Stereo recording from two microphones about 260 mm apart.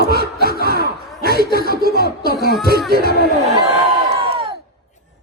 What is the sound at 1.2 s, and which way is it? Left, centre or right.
Speech, right.